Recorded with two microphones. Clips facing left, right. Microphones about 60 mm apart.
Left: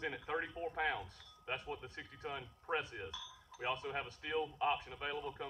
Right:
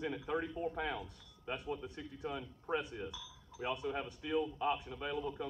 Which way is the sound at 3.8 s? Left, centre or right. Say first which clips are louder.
Right 3 dB; centre.